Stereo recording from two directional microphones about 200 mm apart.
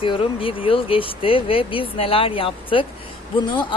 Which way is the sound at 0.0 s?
25° left (ahead or behind).